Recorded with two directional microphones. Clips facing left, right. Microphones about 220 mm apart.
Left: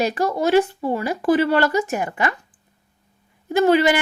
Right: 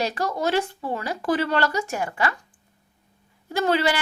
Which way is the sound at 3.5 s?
15° left (ahead or behind).